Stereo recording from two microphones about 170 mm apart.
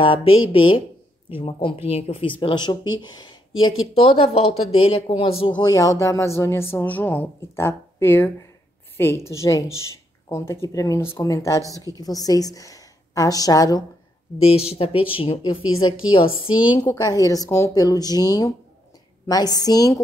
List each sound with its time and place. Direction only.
0.0 s speech: 30° left (ahead or behind)
5.6 s a woman's voice: 20° left (ahead or behind)
14.4 s speech: 35° left (ahead or behind)
16.5 s a woman's voice: 10° right (ahead or behind)
16.8 s speech: 20° left (ahead or behind)